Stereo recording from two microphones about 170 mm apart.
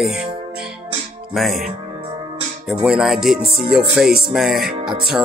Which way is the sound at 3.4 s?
65° right (ahead or behind).